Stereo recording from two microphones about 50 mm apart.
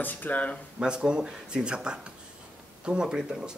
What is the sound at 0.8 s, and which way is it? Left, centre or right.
Speech, centre.